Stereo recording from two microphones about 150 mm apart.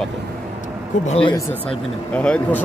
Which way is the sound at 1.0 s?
40° left (ahead or behind).